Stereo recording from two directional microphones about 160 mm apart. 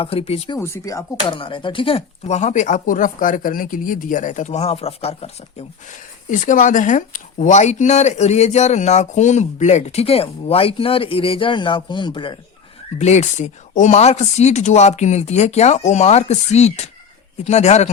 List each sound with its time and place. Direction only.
0.0 s speech: 40° left (ahead or behind)
0.6 s speech: 20° left (ahead or behind)
1.3 s speech: 30° left (ahead or behind)
6.4 s speech: 55° left (ahead or behind); by 12.4 s 30° left (ahead or behind)
13.0 s speech: 45° left (ahead or behind)